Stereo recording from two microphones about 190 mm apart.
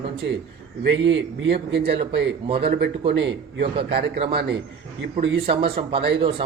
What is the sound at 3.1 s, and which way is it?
Speech, 70° right (ahead or behind).